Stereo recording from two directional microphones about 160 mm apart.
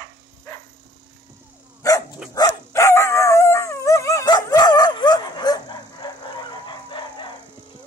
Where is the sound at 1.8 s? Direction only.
20° left (ahead or behind).